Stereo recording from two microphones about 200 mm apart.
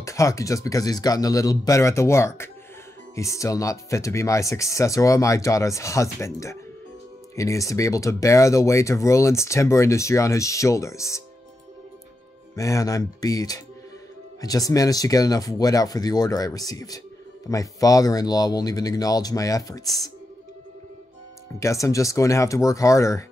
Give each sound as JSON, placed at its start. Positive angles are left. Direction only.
{"t": 0.0, "sound": "speech", "side_deg": 15}
{"t": 12.5, "sound": "speech", "side_deg": 15}
{"t": 21.5, "sound": "speech", "side_deg": 15}